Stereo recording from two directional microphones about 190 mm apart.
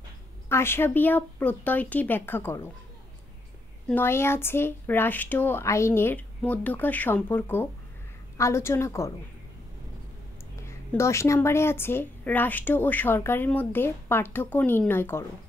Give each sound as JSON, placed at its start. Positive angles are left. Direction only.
{"t": 0.5, "sound": "a woman's voice", "side_deg": 15}
{"t": 3.9, "sound": "a woman's voice", "side_deg": 10}
{"t": 10.5, "sound": "a woman's voice", "side_deg": 15}